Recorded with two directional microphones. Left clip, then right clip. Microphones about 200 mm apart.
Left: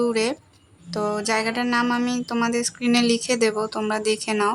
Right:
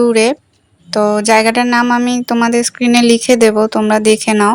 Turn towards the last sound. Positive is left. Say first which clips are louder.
# right 11 dB
turn(degrees=-35)  # may be behind; listen again after turning